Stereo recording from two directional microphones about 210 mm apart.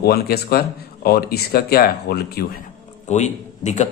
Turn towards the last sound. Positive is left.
turn(degrees=35)  # may be behind; listen again after turning